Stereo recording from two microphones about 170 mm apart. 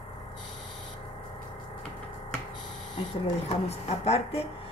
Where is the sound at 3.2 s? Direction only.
40° left (ahead or behind).